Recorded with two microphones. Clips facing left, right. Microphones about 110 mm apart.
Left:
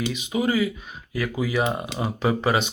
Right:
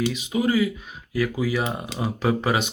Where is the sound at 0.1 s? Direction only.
Centre (ahead or behind).